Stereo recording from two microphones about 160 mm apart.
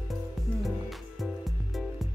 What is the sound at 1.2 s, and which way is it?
Music, centre (ahead or behind).